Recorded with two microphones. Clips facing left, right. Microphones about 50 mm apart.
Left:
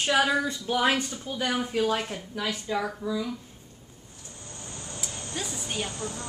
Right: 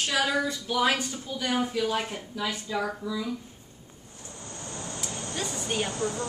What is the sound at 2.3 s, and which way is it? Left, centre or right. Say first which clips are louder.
Speech: even; left.